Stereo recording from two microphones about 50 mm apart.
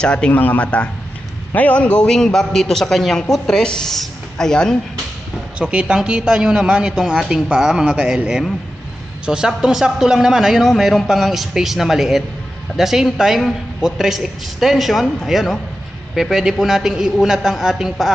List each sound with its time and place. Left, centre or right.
0.0 s a man's voice: centre
0.3 s a man's voice: left
2.0 s a woman's voice: centre
5.5 s a man's voice: centre
7.9 s a man's voice: right